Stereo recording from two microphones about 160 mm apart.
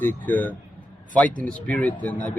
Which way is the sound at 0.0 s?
10° left (ahead or behind).